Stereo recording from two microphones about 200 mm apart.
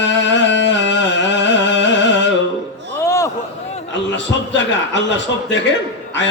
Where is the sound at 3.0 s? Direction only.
15° left (ahead or behind).